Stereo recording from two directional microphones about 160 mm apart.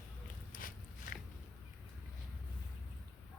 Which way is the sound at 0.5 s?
60° left (ahead or behind).